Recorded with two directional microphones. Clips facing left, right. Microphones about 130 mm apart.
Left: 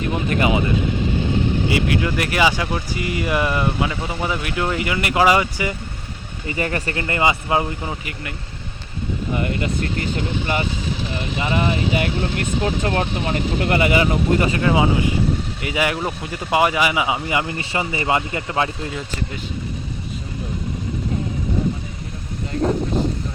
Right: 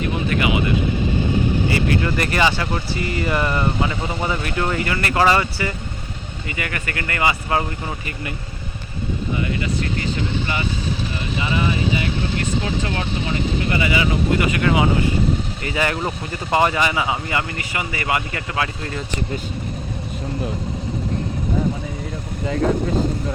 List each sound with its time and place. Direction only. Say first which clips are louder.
1.7 s speech: even; 10° left (ahead or behind)
6.5 s speech: left 5 dB; 30° left (ahead or behind); by 8.1 s 15° left (ahead or behind)
9.3 s speech: left 2 dB; 50° left (ahead or behind)
14.6 s speech: even; 25° left (ahead or behind)
15.6 s speech: left 1 dB; 10° left (ahead or behind)
17.6 s speech: left 3 dB; 30° left (ahead or behind)